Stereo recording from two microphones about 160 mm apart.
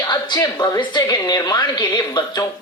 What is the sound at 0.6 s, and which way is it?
A woman's voice, 25° left (ahead or behind).